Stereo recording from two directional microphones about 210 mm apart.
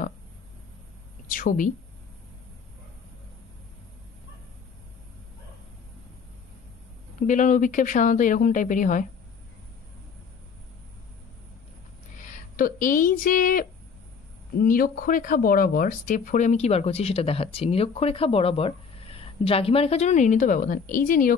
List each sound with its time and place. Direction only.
1.3 s speech: 40° left (ahead or behind)
7.2 s speech: 35° left (ahead or behind)
12.2 s speech: 40° left (ahead or behind)